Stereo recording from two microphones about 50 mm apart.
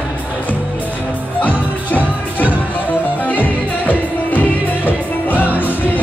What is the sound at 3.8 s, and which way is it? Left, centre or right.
Music, left.